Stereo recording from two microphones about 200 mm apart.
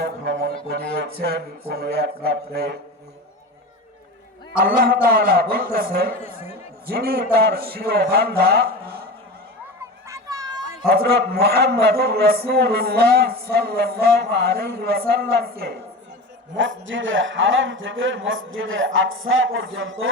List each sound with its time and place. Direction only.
0.0 s speech: 55° right (ahead or behind)
4.6 s a man's voice: 45° right (ahead or behind)
10.1 s a sound: 15° right (ahead or behind)
10.8 s a man's voice: 50° right (ahead or behind)
16.6 s a man's voice: 70° right (ahead or behind)